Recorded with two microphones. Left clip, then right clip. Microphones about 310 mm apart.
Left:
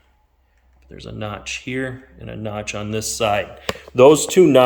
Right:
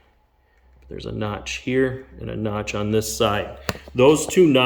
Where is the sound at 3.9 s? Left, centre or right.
Centre.